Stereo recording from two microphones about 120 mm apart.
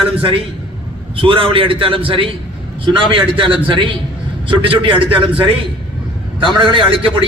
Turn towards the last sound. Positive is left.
turn(degrees=-45)  # may be behind; listen again after turning